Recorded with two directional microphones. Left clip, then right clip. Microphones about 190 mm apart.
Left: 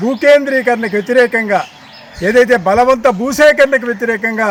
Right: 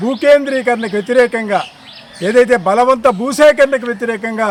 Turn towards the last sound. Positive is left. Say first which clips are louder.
# left 2 dB
turn(degrees=5)  # may be behind; listen again after turning